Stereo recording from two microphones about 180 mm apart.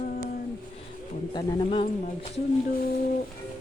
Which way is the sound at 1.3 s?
25° left (ahead or behind).